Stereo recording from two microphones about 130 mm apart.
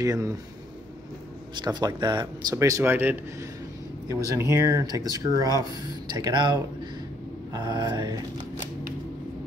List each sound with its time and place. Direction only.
0.0 s speech: 25° right (ahead or behind)
1.5 s speech: 35° right (ahead or behind)
2.8 s speech: 15° right (ahead or behind); by 8.2 s 30° right (ahead or behind)